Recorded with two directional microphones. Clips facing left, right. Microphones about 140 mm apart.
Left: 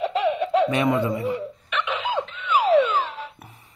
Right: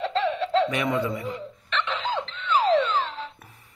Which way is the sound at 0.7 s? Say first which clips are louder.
Left 4 dB; 30° left (ahead or behind).